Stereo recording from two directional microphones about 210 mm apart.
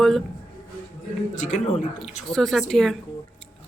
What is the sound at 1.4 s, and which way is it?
Speech, 35° left (ahead or behind).